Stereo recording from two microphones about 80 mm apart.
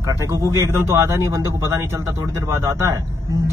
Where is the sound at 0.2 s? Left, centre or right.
Right.